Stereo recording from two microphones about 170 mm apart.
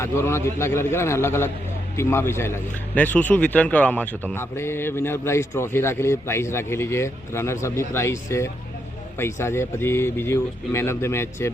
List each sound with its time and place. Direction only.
0.0 s a man's voice: 15° left (ahead or behind)